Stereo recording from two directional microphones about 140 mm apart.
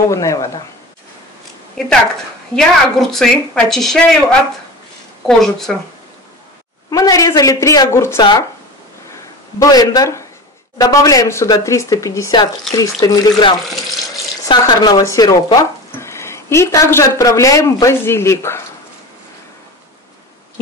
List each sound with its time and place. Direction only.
0.1 s a man's voice: 20° left (ahead or behind)
2.5 s a woman's voice: 5° left (ahead or behind)
6.9 s a man's voice: 25° left (ahead or behind)
8.2 s speech: 30° left (ahead or behind)
9.6 s a man's voice: 25° left (ahead or behind)